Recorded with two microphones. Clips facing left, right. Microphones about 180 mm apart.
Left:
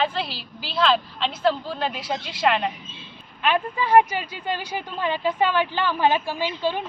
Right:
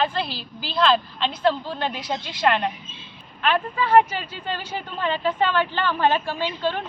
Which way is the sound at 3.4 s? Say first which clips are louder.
Even; 15° left (ahead or behind).